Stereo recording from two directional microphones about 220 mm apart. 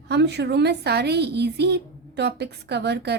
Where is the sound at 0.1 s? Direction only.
50° right (ahead or behind).